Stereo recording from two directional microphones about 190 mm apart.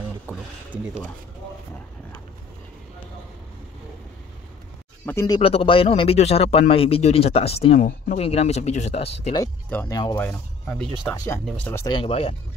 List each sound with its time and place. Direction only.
0.3 s a sound: 10° right (ahead or behind)
0.7 s speech: 10° right (ahead or behind)
5.0 s speech: 15° left (ahead or behind); by 9.4 s 30° left (ahead or behind)
9.4 s speech: 15° left (ahead or behind)
10.1 s speech: 5° left (ahead or behind)
11.8 s speech: 25° left (ahead or behind)